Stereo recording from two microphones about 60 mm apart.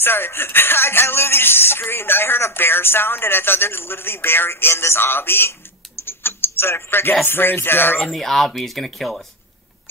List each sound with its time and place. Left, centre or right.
0.0 s speech: left
6.0 s mechanisms: left
7.2 s speech: left
8.1 s speech: centre